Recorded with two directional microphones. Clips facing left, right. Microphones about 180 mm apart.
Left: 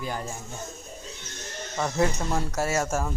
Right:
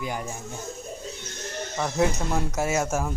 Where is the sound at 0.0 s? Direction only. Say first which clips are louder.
Right 1 dB; 15° right (ahead or behind).